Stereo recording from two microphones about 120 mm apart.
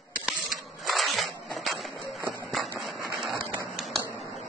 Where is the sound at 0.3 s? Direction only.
Centre (ahead or behind).